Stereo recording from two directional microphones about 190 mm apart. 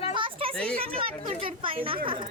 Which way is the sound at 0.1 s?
25° right (ahead or behind).